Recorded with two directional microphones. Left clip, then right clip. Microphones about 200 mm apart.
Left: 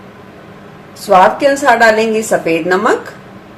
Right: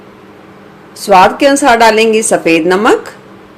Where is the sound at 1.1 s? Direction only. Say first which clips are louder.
Right 2 dB; 45° right (ahead or behind).